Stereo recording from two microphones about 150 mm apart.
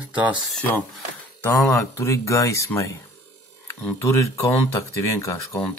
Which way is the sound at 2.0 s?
20° left (ahead or behind).